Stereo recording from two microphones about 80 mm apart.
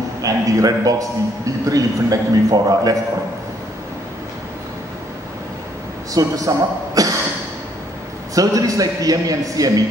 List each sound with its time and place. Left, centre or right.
0.2 s a man's voice: right
6.1 s a man's voice: right
7.0 s a sound: right
8.4 s a man's voice: right